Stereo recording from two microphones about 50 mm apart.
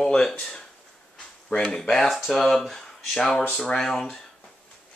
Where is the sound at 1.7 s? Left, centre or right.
Centre.